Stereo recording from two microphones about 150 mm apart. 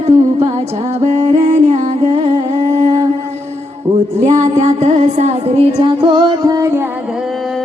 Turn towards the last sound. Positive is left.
turn(degrees=-20)  # may be behind; listen again after turning